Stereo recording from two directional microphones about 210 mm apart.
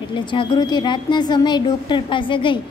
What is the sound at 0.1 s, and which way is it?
A woman's voice, 25° left (ahead or behind).